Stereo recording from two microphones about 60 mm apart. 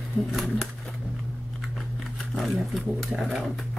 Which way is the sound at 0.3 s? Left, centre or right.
Centre.